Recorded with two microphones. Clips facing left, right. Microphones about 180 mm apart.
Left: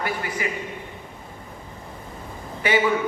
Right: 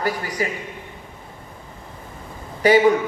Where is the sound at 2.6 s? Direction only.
40° right (ahead or behind).